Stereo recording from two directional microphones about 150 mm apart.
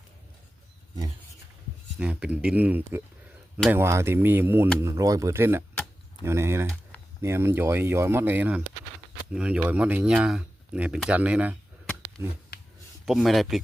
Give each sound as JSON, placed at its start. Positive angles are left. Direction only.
{"t": 2.0, "sound": "speech", "side_deg": -10}
{"t": 12.5, "sound": "a sound", "side_deg": 90}
{"t": 13.1, "sound": "speech", "side_deg": 0}